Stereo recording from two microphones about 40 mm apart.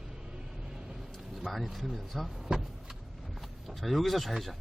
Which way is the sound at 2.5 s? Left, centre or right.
Centre.